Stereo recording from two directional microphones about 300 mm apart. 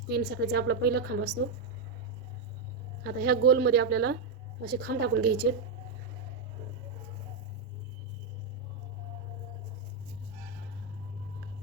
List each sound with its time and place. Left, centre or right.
0.1 s a woman's voice: right
3.0 s a woman's voice: right